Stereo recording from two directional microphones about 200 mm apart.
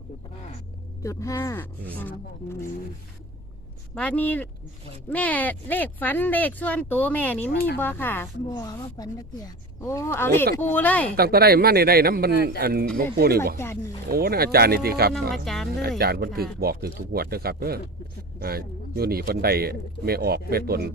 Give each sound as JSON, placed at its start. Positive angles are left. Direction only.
{"t": 1.0, "sound": "a woman's voice", "side_deg": 15}
{"t": 3.9, "sound": "a woman's voice", "side_deg": 5}
{"t": 11.2, "sound": "speech", "side_deg": -50}
{"t": 15.4, "sound": "speech", "side_deg": 0}
{"t": 16.0, "sound": "speech", "side_deg": -50}